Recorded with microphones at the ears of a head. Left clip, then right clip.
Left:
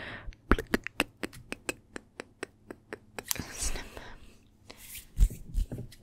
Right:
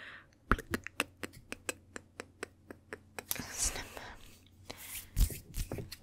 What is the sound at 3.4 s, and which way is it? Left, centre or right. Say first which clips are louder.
Whispering: even; centre.